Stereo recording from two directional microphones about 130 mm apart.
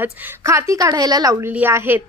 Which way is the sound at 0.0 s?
20° right (ahead or behind).